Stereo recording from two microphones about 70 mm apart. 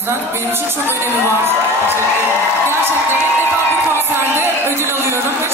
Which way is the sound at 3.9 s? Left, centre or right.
Right.